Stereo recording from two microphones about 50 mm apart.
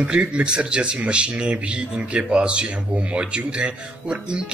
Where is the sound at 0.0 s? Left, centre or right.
Right.